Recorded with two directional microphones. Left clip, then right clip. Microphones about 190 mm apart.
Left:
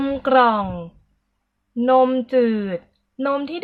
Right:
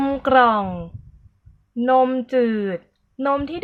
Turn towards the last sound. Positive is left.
turn(degrees=-5)  # may be behind; listen again after turning